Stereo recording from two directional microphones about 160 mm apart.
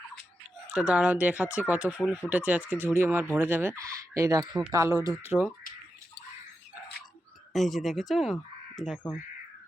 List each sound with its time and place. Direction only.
0.7 s speech: 5° right (ahead or behind)
7.5 s speech: centre (ahead or behind)